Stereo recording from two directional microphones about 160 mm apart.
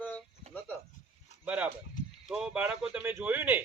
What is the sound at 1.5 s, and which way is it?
A man's voice, 10° right (ahead or behind).